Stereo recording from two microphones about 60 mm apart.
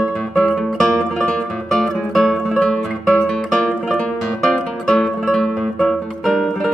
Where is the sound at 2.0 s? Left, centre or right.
Centre.